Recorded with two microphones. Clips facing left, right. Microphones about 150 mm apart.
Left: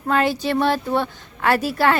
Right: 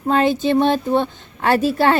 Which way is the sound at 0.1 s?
25° right (ahead or behind).